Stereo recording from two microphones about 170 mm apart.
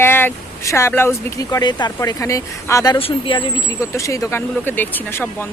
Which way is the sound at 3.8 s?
20° left (ahead or behind).